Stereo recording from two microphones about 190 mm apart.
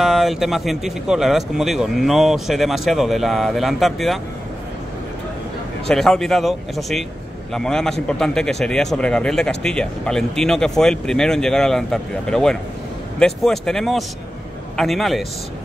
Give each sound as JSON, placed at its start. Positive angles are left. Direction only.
{"t": 0.0, "sound": "speech", "side_deg": 0}
{"t": 5.9, "sound": "speech", "side_deg": 0}